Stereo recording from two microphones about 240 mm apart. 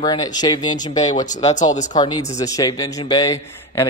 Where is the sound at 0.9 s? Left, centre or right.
Left.